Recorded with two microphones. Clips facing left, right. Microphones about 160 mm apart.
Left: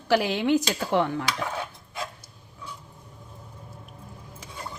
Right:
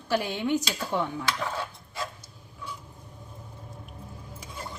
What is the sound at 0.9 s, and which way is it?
Speech, 75° left (ahead or behind).